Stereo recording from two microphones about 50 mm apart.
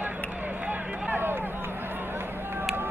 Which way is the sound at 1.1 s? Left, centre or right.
Right.